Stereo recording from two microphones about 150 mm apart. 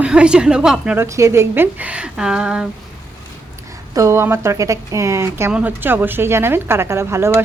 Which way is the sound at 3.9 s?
20° right (ahead or behind).